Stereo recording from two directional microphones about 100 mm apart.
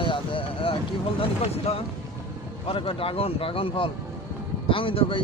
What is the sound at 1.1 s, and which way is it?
Speech, 80° left.